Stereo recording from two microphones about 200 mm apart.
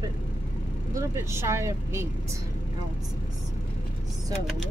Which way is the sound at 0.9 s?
15° right (ahead or behind).